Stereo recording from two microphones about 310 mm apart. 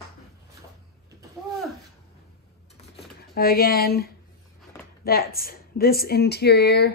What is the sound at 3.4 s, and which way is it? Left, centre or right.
A woman's voice, left.